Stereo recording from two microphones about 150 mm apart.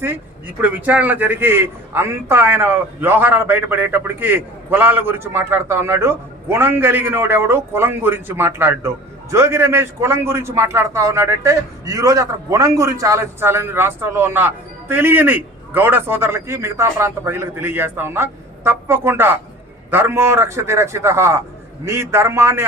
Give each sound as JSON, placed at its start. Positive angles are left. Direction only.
{"t": 0.6, "sound": "a man's voice", "side_deg": -10}